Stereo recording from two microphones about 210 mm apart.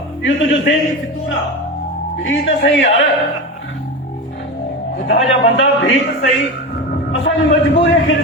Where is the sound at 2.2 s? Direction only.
60° left (ahead or behind).